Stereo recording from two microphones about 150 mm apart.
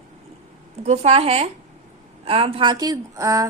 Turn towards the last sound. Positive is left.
turn(degrees=-20)  # may be behind; listen again after turning